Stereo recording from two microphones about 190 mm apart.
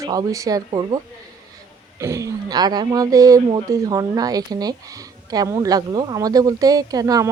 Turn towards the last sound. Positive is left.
turn(degrees=-20)  # may be behind; listen again after turning